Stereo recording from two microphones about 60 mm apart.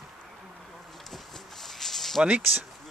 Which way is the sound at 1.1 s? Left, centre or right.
Centre.